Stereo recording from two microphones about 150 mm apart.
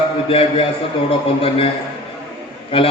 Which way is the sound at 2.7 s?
35° left (ahead or behind).